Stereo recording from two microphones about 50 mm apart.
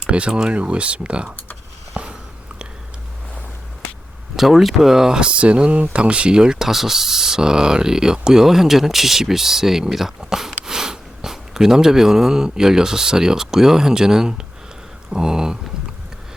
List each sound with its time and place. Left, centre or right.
0.1 s speech: right
1.9 s a sound: right
4.4 s speech: centre